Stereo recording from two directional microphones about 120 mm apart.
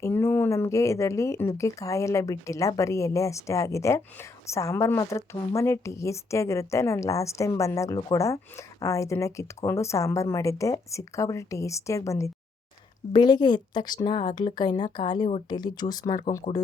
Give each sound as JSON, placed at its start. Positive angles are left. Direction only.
{"t": 0.0, "sound": "speech", "side_deg": 20}
{"t": 13.1, "sound": "speech", "side_deg": 35}
{"t": 16.5, "sound": "speech", "side_deg": 50}